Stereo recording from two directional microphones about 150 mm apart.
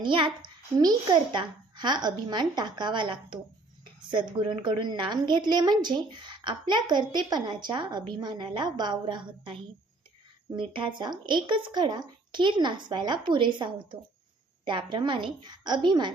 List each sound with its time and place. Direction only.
0.0 s a woman's voice: 30° right (ahead or behind)